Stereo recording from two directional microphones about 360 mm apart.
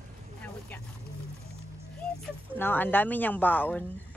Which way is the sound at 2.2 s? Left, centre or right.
Centre.